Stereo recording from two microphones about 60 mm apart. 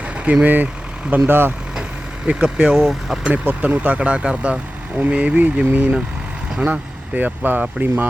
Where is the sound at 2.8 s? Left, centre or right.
Centre.